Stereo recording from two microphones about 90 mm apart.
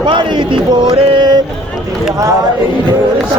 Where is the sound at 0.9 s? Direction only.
65° right (ahead or behind).